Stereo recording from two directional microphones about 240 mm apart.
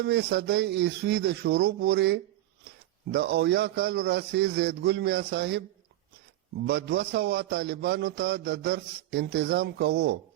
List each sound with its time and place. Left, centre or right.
0.0 s a man's voice: right
6.7 s a man's voice: right